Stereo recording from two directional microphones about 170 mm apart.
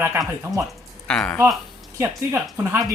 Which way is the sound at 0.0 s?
15° right (ahead or behind).